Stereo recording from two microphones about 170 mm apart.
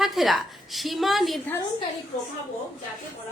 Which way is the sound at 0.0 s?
Centre (ahead or behind).